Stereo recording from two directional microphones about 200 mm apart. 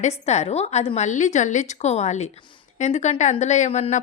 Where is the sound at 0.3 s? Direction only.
35° left (ahead or behind).